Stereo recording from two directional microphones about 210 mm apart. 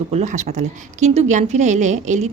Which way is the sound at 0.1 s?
30° right (ahead or behind).